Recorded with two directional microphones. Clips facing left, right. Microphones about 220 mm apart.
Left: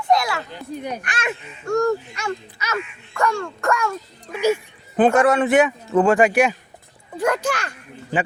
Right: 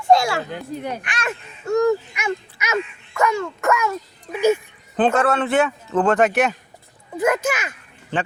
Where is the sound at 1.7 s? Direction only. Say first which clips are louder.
Right 2 dB; centre (ahead or behind).